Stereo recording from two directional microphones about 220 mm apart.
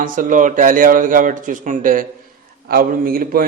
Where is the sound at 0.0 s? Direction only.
35° right (ahead or behind).